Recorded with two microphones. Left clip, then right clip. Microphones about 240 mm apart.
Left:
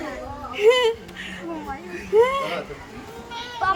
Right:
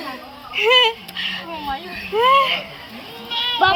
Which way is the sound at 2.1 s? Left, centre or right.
Centre.